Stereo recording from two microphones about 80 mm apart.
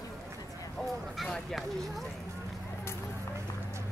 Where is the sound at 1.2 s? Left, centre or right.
Centre.